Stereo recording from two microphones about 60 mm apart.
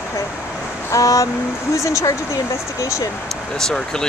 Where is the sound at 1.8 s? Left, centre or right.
Left.